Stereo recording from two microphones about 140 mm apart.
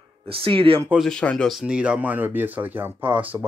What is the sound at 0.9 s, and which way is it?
Speech, 5° left (ahead or behind).